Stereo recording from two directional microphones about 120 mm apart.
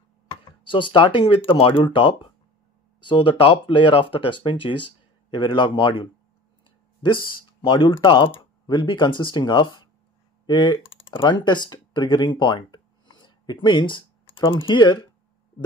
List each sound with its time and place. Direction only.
0.3 s speech: 45° left (ahead or behind)